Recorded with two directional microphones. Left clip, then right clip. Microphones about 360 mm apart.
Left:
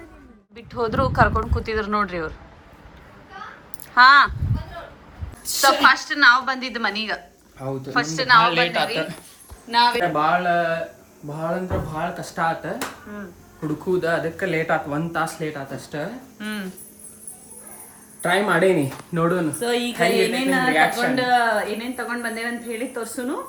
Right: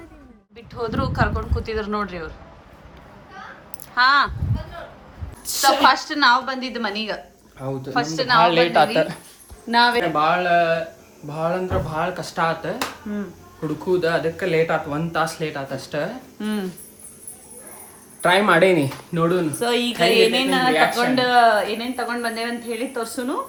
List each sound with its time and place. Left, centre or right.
0.5 s speech: centre
3.9 s a woman's voice: centre
5.5 s speech: centre
6.0 s a woman's voice: centre
6.4 s a woman's voice: centre
8.7 s speech: right
10.0 s speech: centre
14.0 s speech: centre
18.2 s speech: centre